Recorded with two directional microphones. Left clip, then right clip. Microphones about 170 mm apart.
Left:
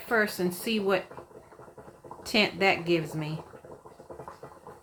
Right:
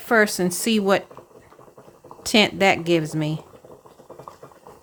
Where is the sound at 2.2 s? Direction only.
60° right (ahead or behind).